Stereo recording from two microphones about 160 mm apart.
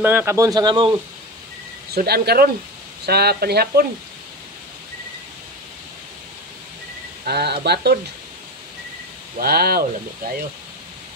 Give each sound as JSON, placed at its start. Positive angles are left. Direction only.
{"t": 0.0, "sound": "a man's voice", "side_deg": -15}
{"t": 1.9, "sound": "speech", "side_deg": -75}
{"t": 3.1, "sound": "speech", "side_deg": -80}
{"t": 7.2, "sound": "speech", "side_deg": -90}
{"t": 9.4, "sound": "speech", "side_deg": -75}